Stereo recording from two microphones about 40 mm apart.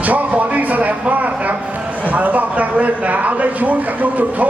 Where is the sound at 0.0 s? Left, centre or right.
Right.